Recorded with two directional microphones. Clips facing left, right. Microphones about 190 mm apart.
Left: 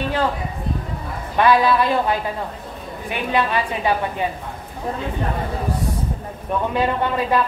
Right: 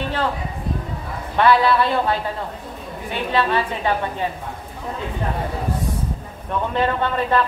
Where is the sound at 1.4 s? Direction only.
15° left (ahead or behind).